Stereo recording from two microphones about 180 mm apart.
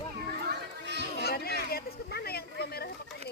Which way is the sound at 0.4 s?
70° right (ahead or behind).